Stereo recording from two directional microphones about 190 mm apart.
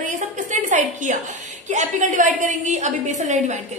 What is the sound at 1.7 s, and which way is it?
A woman's voice, 40° right (ahead or behind).